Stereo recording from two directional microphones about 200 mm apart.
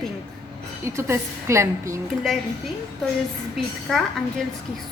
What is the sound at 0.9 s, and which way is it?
A woman's voice, 15° right (ahead or behind).